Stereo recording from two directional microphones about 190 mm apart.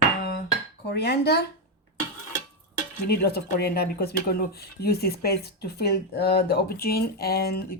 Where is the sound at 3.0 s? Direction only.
55° left (ahead or behind).